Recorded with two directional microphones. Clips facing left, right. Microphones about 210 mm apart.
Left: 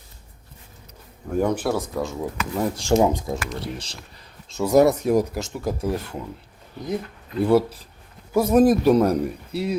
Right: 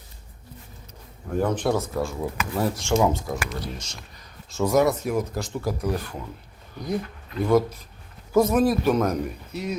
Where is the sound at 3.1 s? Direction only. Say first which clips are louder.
Left 1 dB; 20° left (ahead or behind).